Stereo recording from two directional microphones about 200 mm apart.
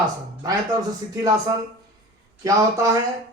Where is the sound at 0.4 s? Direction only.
15° right (ahead or behind).